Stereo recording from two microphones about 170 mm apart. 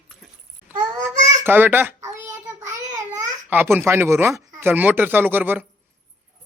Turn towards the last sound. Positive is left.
turn(degrees=-10)  # may be behind; listen again after turning